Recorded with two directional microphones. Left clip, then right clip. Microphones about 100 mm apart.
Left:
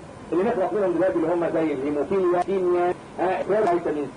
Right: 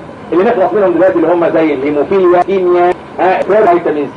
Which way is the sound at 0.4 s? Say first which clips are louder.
Right 13 dB; 50° right (ahead or behind).